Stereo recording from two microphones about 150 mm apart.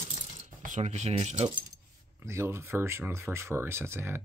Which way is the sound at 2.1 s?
15° right (ahead or behind).